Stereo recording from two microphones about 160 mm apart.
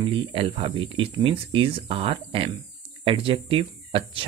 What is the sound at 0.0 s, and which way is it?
Speech, 35° right (ahead or behind).